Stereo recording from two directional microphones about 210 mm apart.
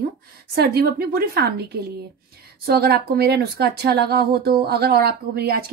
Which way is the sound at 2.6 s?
50° right (ahead or behind).